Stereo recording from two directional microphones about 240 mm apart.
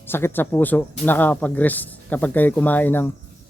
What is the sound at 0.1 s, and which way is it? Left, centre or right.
Speech, centre.